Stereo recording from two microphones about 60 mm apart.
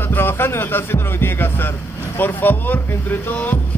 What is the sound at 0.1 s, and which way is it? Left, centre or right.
A man's voice, left.